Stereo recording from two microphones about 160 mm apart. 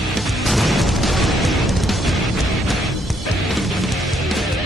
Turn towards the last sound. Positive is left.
turn(degrees=0)  # may be behind; listen again after turning